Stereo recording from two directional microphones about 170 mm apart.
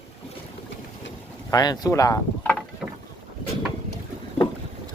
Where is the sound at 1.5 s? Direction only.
25° left (ahead or behind).